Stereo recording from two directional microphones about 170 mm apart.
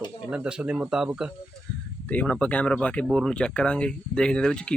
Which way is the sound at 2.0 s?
5° left (ahead or behind).